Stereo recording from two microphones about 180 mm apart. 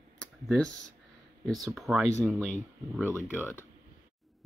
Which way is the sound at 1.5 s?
20° right (ahead or behind).